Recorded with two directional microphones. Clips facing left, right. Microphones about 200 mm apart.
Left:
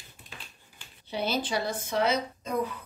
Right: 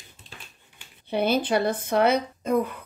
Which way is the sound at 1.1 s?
55° right (ahead or behind).